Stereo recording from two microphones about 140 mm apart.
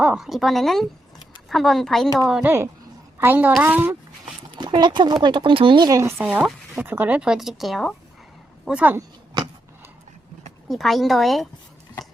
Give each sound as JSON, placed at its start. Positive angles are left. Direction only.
{"t": 0.0, "sound": "a woman's voice", "side_deg": -5}
{"t": 3.2, "sound": "speech", "side_deg": -15}
{"t": 4.5, "sound": "speech", "side_deg": -30}
{"t": 8.6, "sound": "speech", "side_deg": -10}
{"t": 10.7, "sound": "a woman's voice", "side_deg": 0}